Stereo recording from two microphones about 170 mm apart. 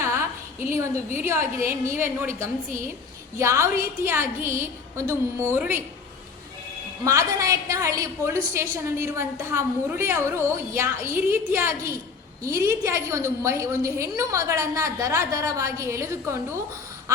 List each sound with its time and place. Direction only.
0.0 s a sound: 15° right (ahead or behind)
1.2 s a woman's voice: 15° right (ahead or behind)
7.0 s a woman's voice: 20° right (ahead or behind)